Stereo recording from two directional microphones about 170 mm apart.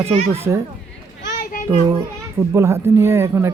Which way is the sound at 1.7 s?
10° right (ahead or behind).